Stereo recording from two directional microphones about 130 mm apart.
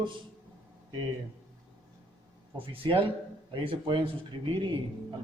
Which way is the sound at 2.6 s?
45° right (ahead or behind).